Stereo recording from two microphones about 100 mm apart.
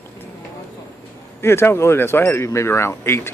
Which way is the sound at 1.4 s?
25° left (ahead or behind).